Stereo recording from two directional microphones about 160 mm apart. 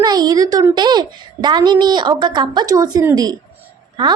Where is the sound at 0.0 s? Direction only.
25° right (ahead or behind).